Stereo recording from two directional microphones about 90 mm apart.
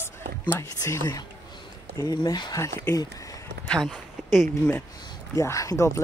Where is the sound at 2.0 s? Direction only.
50° left (ahead or behind).